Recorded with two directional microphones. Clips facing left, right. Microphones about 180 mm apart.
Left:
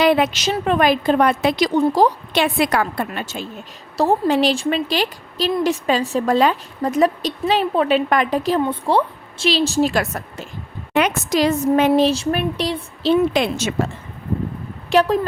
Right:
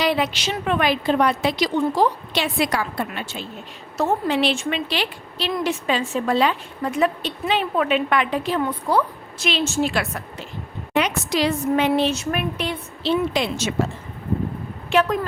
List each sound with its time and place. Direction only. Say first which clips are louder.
0.0 s a woman's voice: left 5 dB; 55° left (ahead or behind)
3.9 s a woman's voice: left 4 dB; 35° left (ahead or behind)
8.6 s a woman's voice: left 3 dB; 25° left (ahead or behind)
13.3 s a woman's voice: left 4 dB; 55° left (ahead or behind)
14.8 s speech: left 4 dB; 35° left (ahead or behind)